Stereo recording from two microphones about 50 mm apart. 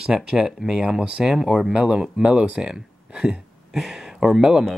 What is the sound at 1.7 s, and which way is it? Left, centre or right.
Speech, right.